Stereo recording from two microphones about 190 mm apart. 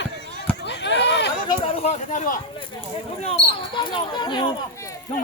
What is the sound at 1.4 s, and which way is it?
Speech, 30° left (ahead or behind).